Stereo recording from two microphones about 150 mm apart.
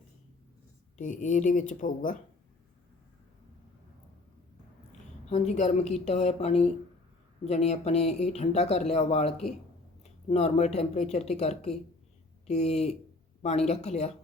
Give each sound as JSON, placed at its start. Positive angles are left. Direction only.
{"t": 0.9, "sound": "speech", "side_deg": 55}
{"t": 4.9, "sound": "a woman's voice", "side_deg": 50}